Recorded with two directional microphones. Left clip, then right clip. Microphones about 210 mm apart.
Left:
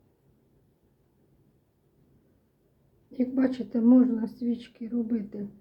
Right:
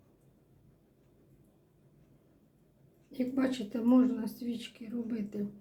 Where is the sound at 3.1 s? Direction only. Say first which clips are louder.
Left 5 dB; 25° left (ahead or behind).